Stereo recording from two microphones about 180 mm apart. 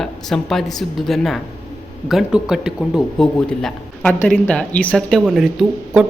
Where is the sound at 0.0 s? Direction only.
Centre (ahead or behind).